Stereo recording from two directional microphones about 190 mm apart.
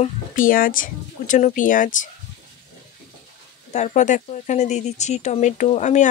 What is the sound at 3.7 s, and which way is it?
Speech, 40° left (ahead or behind).